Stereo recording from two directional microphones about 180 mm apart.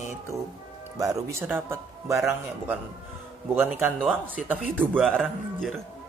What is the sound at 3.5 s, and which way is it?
Speech, 15° right (ahead or behind).